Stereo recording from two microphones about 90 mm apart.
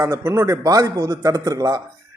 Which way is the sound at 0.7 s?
40° right (ahead or behind).